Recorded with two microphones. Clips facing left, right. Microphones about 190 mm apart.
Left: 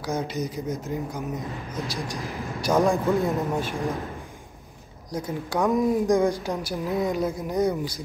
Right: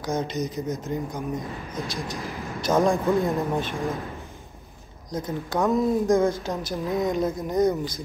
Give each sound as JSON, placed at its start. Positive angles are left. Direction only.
{"t": 0.0, "sound": "a woman's voice", "side_deg": 10}
{"t": 1.8, "sound": "speech", "side_deg": 30}
{"t": 2.0, "sound": "a woman's voice", "side_deg": 15}
{"t": 2.7, "sound": "a man's voice", "side_deg": 0}
{"t": 5.1, "sound": "a woman's voice", "side_deg": 10}